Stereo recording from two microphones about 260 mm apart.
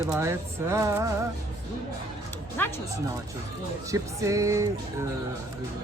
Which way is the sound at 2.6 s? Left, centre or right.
Centre.